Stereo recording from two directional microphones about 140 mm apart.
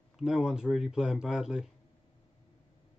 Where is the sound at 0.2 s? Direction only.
5° right (ahead or behind).